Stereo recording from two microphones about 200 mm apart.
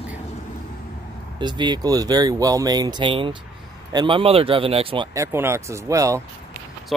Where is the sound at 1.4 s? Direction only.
20° right (ahead or behind).